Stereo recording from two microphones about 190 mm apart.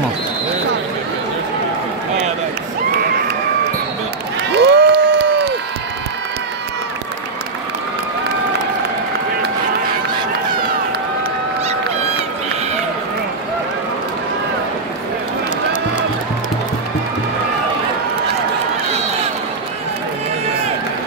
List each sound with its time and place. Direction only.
4.5 s crowd: 60° right (ahead or behind)